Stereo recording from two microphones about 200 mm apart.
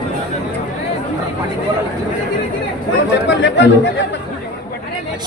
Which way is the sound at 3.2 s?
60° left (ahead or behind).